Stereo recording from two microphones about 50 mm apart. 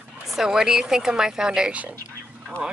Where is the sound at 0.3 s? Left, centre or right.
Centre.